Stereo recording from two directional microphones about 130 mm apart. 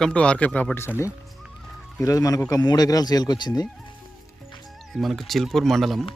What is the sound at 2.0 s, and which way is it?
Speech, 25° left (ahead or behind).